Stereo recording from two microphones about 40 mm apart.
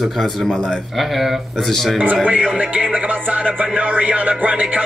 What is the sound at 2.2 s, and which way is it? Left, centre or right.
Music, right.